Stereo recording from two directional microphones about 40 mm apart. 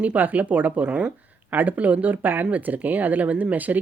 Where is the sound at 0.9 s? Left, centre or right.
Right.